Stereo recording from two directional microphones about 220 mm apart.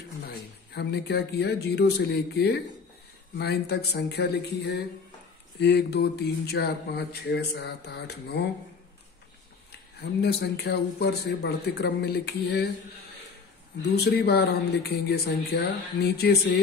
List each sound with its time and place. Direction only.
0.7 s speech: 50° left (ahead or behind)
10.2 s speech: 50° left (ahead or behind)
13.9 s speech: 45° left (ahead or behind)